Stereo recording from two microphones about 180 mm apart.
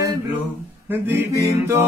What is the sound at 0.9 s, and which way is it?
Music, 10° right (ahead or behind).